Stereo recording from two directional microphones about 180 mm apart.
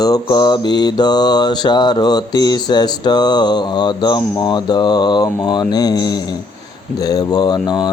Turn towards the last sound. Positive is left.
turn(degrees=20)  # may be behind; listen again after turning